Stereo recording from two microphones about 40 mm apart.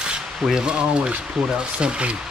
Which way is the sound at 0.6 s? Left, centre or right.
Right.